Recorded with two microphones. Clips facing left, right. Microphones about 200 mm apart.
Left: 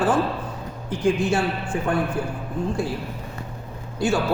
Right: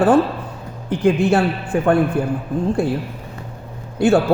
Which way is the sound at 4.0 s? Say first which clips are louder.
Right 8 dB; 60° right (ahead or behind).